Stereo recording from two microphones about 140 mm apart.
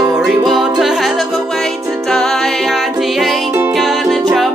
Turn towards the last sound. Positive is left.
turn(degrees=0)  # may be behind; listen again after turning